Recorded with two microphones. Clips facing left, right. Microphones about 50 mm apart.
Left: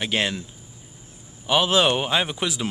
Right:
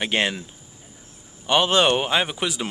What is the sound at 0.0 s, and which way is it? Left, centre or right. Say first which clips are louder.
Speech: right 1 dB; centre.